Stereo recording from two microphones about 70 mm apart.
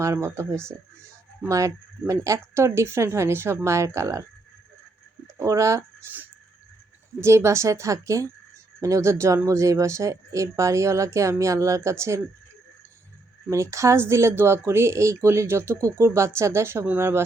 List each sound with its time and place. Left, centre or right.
0.0 s speech: right
5.4 s speech: right
7.2 s speech: right
13.5 s speech: right